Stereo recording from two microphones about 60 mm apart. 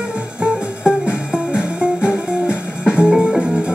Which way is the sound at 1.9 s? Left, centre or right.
Left.